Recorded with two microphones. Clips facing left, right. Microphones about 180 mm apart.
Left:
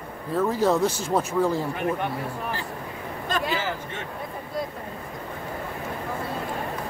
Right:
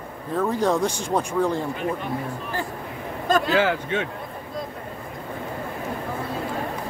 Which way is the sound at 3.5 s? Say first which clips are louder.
Right 8 dB; 80° right.